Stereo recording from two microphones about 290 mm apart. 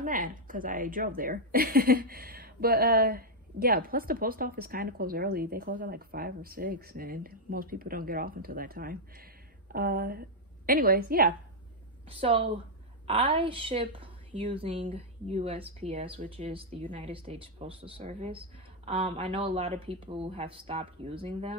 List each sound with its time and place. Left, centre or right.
0.0 s a woman's voice: right
12.1 s a woman's voice: centre